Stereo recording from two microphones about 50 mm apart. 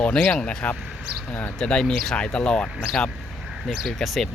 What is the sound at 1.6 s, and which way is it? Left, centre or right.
Speech, centre.